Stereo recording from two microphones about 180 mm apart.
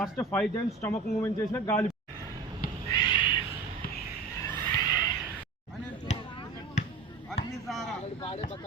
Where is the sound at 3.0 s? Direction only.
25° left (ahead or behind).